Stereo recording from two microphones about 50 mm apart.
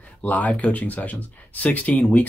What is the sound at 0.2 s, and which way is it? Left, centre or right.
Speech, left.